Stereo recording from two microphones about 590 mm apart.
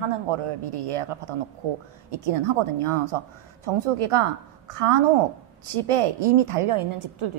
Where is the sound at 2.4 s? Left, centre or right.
Right.